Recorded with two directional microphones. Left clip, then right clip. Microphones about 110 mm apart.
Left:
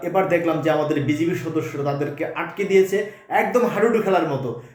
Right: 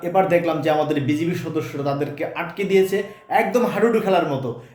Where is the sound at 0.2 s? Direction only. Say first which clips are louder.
Right 2 dB; 45° right (ahead or behind).